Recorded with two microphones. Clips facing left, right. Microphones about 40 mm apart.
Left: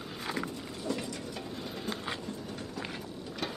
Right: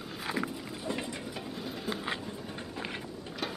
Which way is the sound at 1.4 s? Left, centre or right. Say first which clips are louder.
Right 1 dB; centre.